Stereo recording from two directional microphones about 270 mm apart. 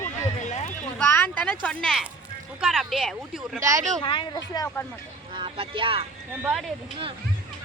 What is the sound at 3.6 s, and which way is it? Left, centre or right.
Speech, centre.